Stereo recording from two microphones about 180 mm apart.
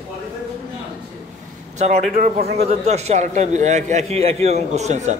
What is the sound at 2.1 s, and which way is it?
Speech, 50° right (ahead or behind).